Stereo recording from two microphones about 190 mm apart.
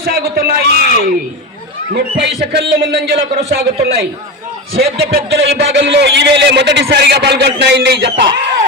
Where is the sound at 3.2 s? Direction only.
40° right (ahead or behind).